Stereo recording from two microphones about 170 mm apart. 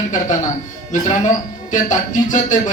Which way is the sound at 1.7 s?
45° left (ahead or behind).